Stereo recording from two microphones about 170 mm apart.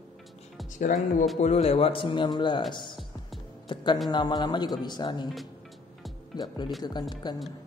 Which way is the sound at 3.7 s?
25° left (ahead or behind).